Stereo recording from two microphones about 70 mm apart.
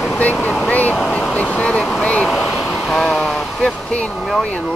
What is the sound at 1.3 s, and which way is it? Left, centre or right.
Speech, left.